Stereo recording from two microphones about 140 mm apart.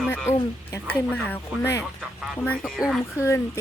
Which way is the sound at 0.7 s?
15° left (ahead or behind).